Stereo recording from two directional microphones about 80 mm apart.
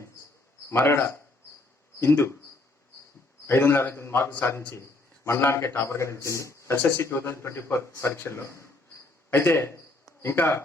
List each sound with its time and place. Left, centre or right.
0.7 s a man's voice: left
3.4 s a man's voice: left